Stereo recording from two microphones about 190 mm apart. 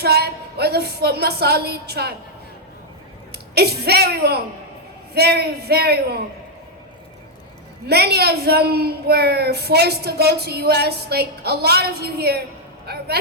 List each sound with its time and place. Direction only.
0.0 s a woman's voice: 55° right (ahead or behind)
3.5 s a woman's voice: 55° right (ahead or behind)
7.9 s a woman's voice: 55° right (ahead or behind)
12.8 s vehicle: 55° right (ahead or behind)